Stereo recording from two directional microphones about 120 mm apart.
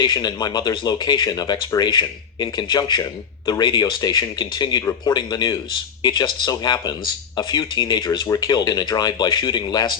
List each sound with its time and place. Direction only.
0.0 s speech: 35° left (ahead or behind)